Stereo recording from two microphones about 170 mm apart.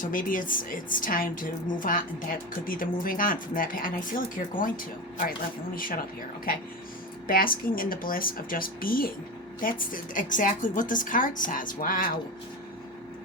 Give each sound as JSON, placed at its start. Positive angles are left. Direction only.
{"t": 0.0, "sound": "a woman's voice", "side_deg": 55}
{"t": 7.3, "sound": "a woman's voice", "side_deg": 60}